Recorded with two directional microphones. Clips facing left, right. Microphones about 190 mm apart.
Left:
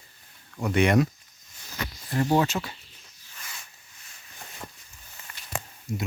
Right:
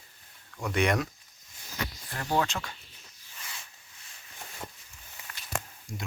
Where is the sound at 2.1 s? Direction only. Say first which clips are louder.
Left 7 dB; 15° left (ahead or behind).